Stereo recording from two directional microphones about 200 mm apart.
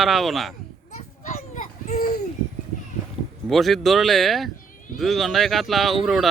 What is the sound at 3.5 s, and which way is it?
Speech, centre (ahead or behind).